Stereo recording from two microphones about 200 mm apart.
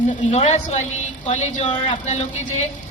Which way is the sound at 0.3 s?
35° left (ahead or behind).